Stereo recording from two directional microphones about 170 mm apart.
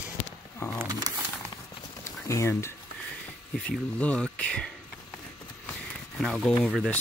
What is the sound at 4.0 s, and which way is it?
Speech, 5° left (ahead or behind).